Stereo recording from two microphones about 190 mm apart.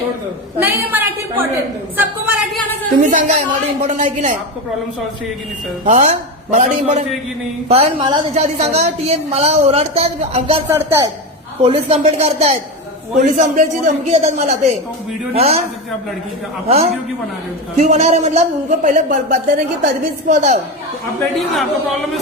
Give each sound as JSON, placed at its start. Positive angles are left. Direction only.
{"t": 0.6, "sound": "a woman's voice", "side_deg": -10}
{"t": 2.0, "sound": "a sound", "side_deg": -10}
{"t": 3.0, "sound": "a woman's voice", "side_deg": -40}
{"t": 5.8, "sound": "a woman's voice", "side_deg": -35}
{"t": 10.7, "sound": "a woman's voice", "side_deg": -15}
{"t": 11.6, "sound": "a woman's voice", "side_deg": -30}
{"t": 16.6, "sound": "a woman's voice", "side_deg": -35}
{"t": 21.2, "sound": "speech", "side_deg": 0}